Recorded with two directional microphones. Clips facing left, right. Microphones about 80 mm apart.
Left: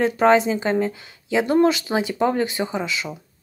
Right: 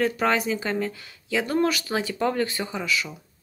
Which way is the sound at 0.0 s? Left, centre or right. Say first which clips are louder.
Left 7 dB; left.